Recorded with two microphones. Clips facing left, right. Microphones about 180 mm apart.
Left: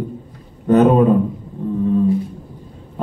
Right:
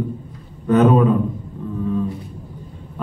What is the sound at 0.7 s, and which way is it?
Speech, 35° left (ahead or behind).